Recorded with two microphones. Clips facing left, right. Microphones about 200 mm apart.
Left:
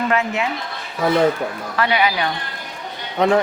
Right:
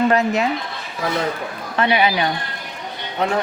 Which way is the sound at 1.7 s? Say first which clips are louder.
Right 2 dB; 25° right (ahead or behind).